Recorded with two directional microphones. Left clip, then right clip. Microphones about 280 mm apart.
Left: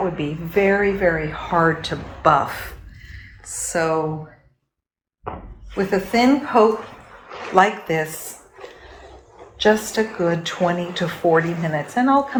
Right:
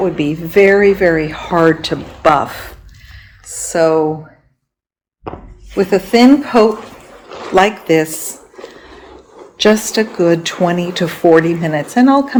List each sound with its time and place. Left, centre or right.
0.2 s speech: right
5.7 s speech: right
9.6 s speech: right